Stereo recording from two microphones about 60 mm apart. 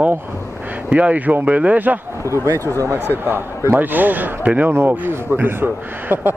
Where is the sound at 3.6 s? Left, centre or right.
Right.